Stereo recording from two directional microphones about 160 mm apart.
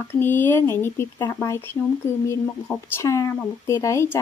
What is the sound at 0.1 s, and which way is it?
Speech, 15° left (ahead or behind).